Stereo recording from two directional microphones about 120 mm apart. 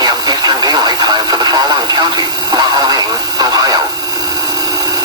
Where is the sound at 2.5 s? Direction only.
35° right (ahead or behind).